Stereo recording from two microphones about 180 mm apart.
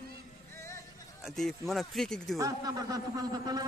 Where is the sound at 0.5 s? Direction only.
15° left (ahead or behind).